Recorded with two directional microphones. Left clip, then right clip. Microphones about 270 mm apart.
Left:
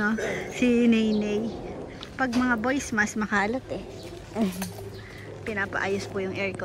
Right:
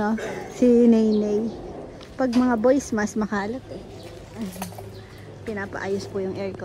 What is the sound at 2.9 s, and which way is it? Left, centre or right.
Speech, right.